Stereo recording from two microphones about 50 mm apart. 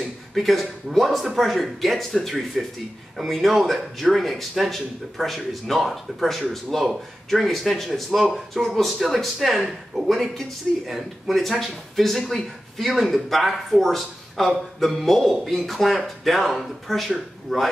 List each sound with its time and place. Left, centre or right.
0.0 s speech: centre